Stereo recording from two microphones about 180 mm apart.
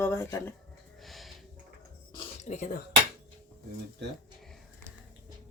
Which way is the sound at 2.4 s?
45° left (ahead or behind).